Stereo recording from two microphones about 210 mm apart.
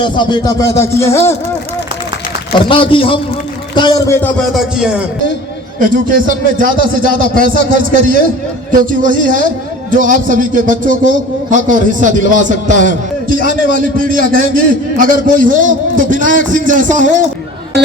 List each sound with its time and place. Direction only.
0.0 s speech: 20° left (ahead or behind)
2.5 s a man's voice: 25° left (ahead or behind)
4.4 s speech: centre (ahead or behind)
5.8 s a man's voice: 40° right (ahead or behind)